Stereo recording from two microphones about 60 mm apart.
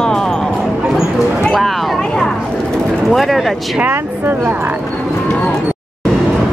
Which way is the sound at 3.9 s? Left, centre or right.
Right.